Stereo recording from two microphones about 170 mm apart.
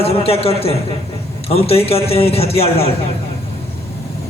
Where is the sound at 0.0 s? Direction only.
35° left (ahead or behind).